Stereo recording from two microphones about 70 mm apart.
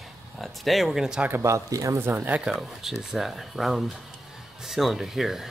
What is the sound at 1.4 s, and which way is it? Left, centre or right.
Speech, right.